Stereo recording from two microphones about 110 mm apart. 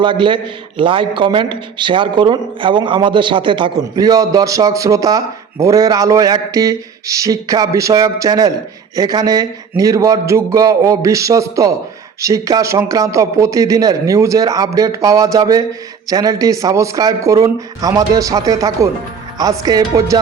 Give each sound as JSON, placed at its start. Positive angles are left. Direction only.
{"t": 0.0, "sound": "a man's voice", "side_deg": -45}
{"t": 3.8, "sound": "a man's voice", "side_deg": -35}